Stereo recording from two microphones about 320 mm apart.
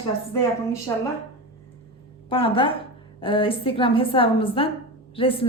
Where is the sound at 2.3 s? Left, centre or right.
Centre.